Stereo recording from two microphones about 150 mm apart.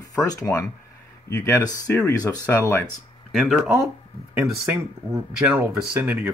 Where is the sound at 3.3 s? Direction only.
5° right (ahead or behind).